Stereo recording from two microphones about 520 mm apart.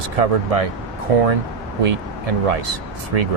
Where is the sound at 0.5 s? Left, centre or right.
Right.